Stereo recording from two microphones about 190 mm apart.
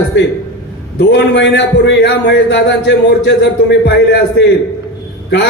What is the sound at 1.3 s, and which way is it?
A man's voice, 70° left (ahead or behind).